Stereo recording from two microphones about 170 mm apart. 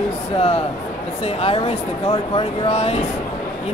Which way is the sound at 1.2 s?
35° left (ahead or behind).